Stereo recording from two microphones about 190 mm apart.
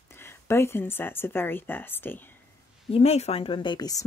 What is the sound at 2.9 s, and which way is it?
Speech, 35° left (ahead or behind).